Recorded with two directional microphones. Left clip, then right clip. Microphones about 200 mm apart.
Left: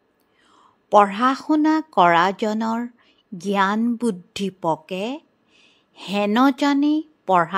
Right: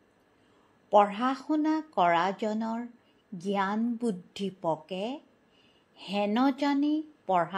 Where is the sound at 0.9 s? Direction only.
30° left (ahead or behind).